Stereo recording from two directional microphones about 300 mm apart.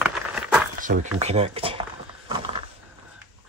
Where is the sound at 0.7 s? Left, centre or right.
Right.